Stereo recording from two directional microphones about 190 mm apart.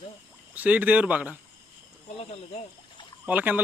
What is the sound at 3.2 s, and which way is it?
Speech, 10° right (ahead or behind).